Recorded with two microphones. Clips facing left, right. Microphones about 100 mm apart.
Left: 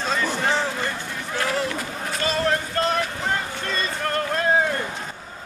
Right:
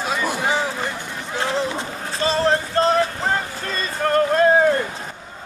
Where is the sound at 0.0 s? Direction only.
10° right (ahead or behind); by 5.0 s 40° right (ahead or behind).